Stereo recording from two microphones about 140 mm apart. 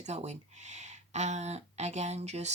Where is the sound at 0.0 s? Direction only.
55° right (ahead or behind).